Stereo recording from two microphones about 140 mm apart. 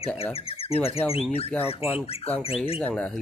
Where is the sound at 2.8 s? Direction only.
10° left (ahead or behind).